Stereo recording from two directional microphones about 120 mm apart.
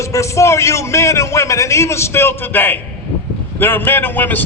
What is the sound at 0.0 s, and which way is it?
A man's voice, 25° left (ahead or behind).